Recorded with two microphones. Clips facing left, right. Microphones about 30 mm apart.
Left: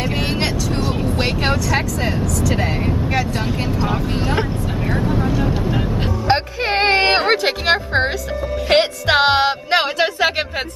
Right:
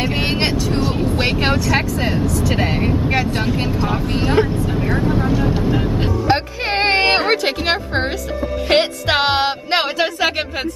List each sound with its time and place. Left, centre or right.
0.7 s vehicle: centre
4.4 s vehicle: centre
6.7 s music: centre